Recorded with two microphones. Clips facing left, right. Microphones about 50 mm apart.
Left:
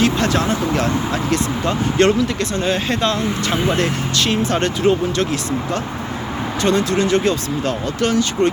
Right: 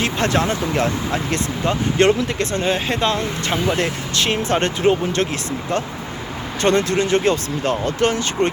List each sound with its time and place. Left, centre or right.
0.0 s speech: right
2.1 s speech: right
2.7 s speech: centre